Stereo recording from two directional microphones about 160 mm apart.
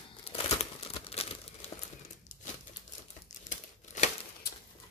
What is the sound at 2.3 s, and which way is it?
Crumpling, 55° left (ahead or behind).